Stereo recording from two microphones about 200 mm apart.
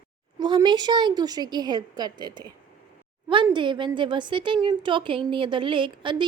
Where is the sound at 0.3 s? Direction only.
20° right (ahead or behind).